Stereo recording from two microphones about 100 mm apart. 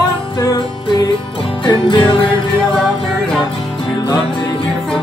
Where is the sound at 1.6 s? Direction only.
50° left (ahead or behind).